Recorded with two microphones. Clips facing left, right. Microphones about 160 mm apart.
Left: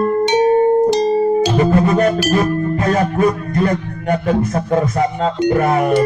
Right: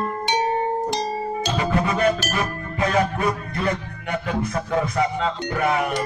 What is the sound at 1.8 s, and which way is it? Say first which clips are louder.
Music: left 7 dB; 45° left (ahead or behind).